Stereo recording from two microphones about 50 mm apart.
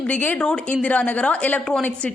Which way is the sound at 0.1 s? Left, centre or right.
Left.